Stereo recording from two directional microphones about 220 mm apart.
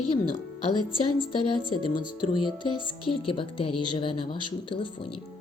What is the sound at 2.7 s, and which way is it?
Speech, 90° left.